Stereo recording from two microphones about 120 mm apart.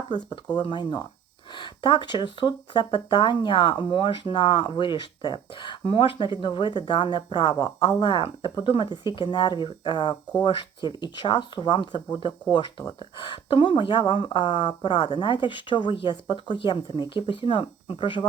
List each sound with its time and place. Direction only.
0.1 s speech: 35° left (ahead or behind)